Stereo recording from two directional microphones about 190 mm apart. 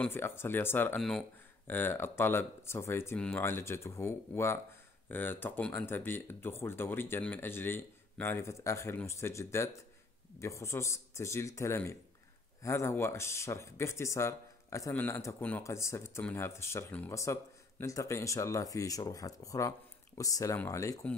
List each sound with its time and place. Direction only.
0.0 s speech: 10° left (ahead or behind)